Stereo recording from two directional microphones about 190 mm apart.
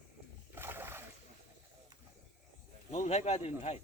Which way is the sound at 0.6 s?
10° right (ahead or behind).